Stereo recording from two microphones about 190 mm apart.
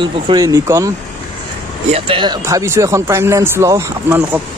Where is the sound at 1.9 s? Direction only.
25° right (ahead or behind); by 4.4 s 10° right (ahead or behind).